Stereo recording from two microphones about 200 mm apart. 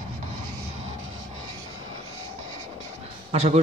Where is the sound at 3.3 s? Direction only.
30° right (ahead or behind).